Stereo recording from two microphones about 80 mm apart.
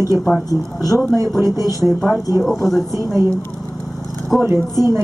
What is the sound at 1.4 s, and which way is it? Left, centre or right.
Speech, right.